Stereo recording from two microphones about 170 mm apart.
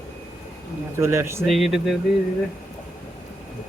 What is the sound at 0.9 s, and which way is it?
Speech, 15° right (ahead or behind).